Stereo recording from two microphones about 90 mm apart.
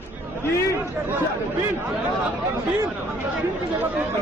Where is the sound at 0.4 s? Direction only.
30° left (ahead or behind).